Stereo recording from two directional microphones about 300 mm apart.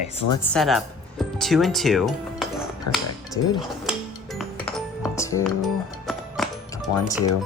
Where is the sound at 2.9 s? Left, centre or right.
Left.